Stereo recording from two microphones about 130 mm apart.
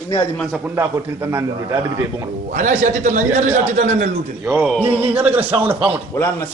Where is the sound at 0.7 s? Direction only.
20° right (ahead or behind).